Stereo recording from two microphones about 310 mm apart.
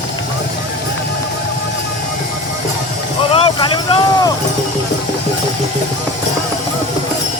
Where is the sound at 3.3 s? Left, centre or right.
Centre.